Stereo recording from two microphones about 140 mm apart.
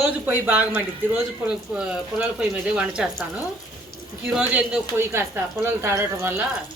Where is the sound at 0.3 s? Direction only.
10° right (ahead or behind).